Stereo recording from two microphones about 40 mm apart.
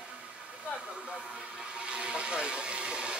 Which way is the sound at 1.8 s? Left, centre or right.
Right.